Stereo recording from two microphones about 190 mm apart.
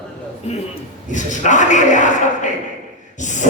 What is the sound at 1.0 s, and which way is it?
A man's voice, 40° left (ahead or behind).